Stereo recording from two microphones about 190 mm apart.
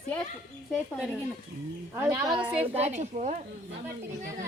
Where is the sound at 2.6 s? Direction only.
35° right (ahead or behind).